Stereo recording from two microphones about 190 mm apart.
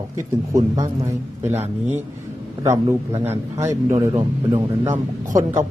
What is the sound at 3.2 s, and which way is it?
Speech, 15° right (ahead or behind).